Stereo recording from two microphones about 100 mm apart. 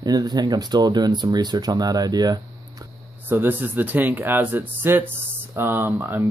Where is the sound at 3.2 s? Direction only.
20° right (ahead or behind).